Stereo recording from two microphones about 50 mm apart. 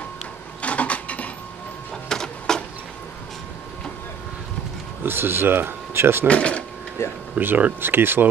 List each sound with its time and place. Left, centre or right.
0.6 s a sound: left
2.0 s printer: centre
5.0 s speech: right
6.2 s speech: left
7.0 s speech: left
7.3 s speech: right